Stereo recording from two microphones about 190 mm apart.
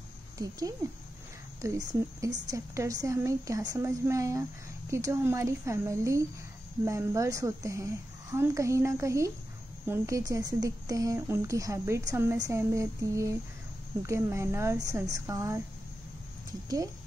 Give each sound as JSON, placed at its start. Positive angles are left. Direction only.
{"t": 0.4, "sound": "a woman's voice", "side_deg": -20}
{"t": 16.6, "sound": "a woman's voice", "side_deg": -20}